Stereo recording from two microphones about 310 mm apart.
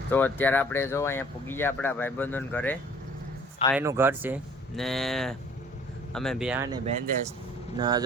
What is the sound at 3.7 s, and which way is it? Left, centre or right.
Speech, centre.